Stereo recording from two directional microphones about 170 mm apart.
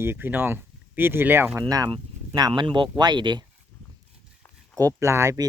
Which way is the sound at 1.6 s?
25° right (ahead or behind).